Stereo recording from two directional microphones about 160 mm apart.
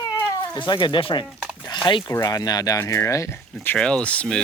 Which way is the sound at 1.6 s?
25° left (ahead or behind).